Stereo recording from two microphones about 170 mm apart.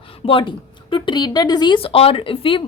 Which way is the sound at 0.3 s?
30° left (ahead or behind).